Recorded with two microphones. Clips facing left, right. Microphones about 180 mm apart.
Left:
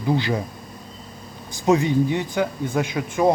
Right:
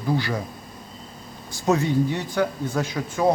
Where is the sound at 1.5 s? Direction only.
15° left (ahead or behind).